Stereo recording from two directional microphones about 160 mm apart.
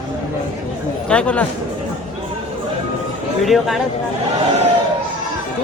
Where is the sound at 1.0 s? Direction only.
5° left (ahead or behind).